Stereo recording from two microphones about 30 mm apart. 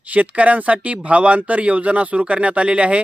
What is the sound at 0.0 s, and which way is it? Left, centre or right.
Speech, right.